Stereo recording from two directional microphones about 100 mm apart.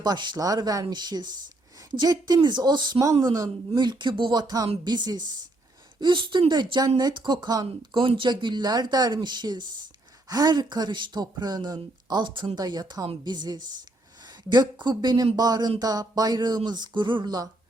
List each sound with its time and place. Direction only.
0.0 s a woman's voice: 45° right (ahead or behind)